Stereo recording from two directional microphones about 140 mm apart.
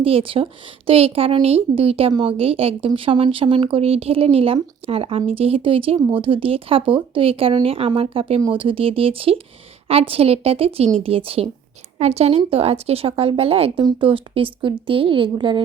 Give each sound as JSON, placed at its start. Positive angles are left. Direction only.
{"t": 0.0, "sound": "a woman's voice", "side_deg": -40}